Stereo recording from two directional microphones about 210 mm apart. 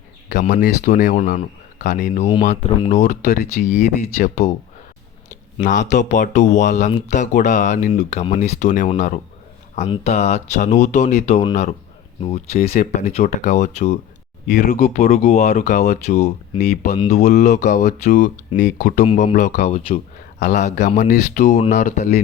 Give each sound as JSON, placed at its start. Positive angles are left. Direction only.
{"t": 0.3, "sound": "speech", "side_deg": 35}
{"t": 5.5, "sound": "speech", "side_deg": 35}